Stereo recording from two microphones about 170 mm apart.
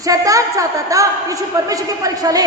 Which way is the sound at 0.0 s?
20° right (ahead or behind).